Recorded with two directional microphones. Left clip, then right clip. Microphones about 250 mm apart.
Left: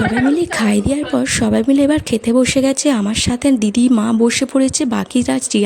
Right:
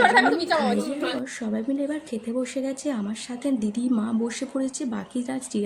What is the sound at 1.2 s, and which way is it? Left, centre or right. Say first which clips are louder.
Speech: left 15 dB; left.